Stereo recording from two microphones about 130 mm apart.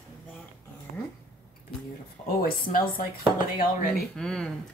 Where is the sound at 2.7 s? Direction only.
90° left.